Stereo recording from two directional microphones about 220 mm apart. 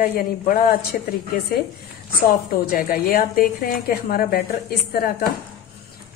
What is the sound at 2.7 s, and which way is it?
A woman's voice, 40° left (ahead or behind).